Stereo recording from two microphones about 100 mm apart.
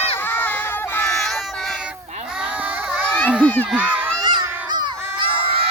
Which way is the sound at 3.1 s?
10° left (ahead or behind).